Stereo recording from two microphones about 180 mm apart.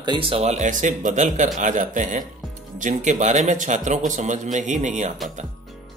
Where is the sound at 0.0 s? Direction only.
25° right (ahead or behind).